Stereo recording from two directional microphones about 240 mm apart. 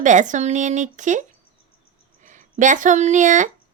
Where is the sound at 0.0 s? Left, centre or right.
Right.